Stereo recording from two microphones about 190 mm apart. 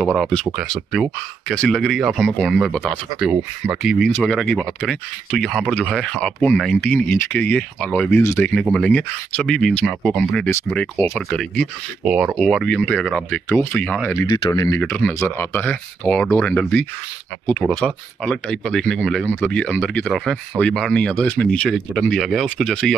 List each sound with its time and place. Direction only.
0.2 s speech: centre (ahead or behind)
12.0 s speech: 5° right (ahead or behind)
14.3 s speech: 20° left (ahead or behind)
14.8 s speech: 5° left (ahead or behind)